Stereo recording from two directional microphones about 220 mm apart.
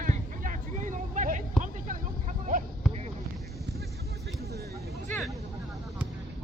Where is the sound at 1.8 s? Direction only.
40° right (ahead or behind).